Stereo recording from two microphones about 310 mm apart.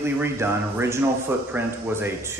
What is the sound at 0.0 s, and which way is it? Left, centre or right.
Speech, centre.